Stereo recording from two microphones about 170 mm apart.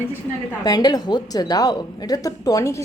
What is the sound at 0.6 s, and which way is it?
A woman's voice, 25° left (ahead or behind).